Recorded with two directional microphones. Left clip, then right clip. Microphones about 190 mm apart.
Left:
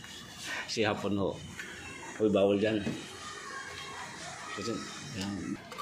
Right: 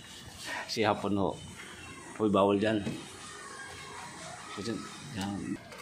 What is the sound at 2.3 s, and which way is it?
Speech, 35° right (ahead or behind).